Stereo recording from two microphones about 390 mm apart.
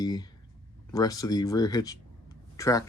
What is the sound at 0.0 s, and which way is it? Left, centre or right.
Speech, centre.